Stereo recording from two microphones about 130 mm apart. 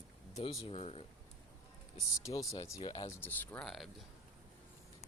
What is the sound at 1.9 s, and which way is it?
Speech, 25° left (ahead or behind).